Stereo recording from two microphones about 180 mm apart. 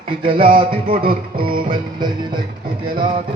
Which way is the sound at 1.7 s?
25° right (ahead or behind).